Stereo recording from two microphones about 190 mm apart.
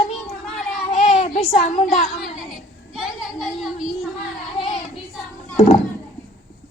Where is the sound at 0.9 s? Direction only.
35° left (ahead or behind).